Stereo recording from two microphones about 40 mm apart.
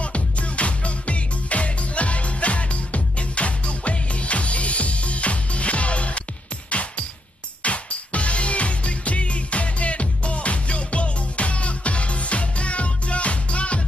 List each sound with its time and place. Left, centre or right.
0.0 s music: left